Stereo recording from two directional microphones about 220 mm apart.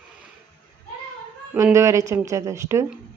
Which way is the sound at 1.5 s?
15° right (ahead or behind).